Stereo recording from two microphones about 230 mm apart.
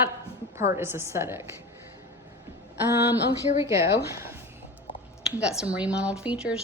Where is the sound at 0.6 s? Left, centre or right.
Centre.